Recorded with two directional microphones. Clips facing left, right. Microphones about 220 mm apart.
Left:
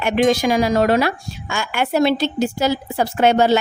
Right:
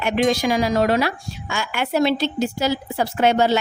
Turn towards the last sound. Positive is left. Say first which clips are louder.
# left 3 dB
turn(degrees=50)  # may be behind; listen again after turning